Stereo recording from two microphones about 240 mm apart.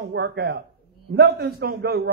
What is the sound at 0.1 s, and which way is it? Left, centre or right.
A man's voice, right.